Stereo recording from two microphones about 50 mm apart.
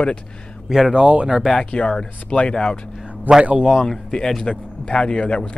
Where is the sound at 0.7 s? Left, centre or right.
Centre.